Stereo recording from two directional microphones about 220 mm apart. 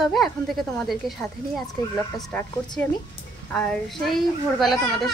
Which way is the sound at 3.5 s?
5° left (ahead or behind).